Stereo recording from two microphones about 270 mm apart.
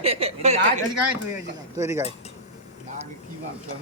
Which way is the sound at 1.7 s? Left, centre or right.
Centre.